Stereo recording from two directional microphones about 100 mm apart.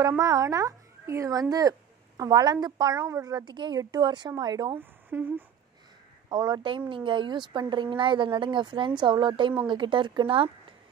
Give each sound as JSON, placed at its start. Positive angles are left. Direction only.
{"t": 0.2, "sound": "a woman's voice", "side_deg": -35}
{"t": 3.0, "sound": "speech", "side_deg": -30}
{"t": 4.7, "sound": "speech", "side_deg": -20}
{"t": 6.2, "sound": "speech", "side_deg": -45}